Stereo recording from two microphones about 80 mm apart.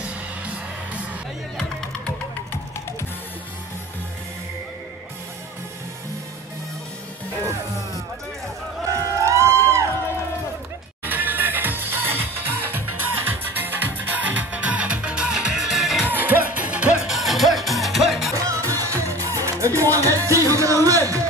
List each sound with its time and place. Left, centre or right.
1.6 s music: centre
8.8 s a sound: right
9.3 s music: right
11.1 s music: right; by 16.1 s centre
16.1 s music: right
17.0 s music: centre
18.3 s music: right